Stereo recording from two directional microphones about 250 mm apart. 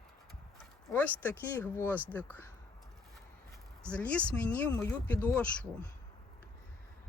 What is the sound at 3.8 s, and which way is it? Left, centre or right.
Speech, centre.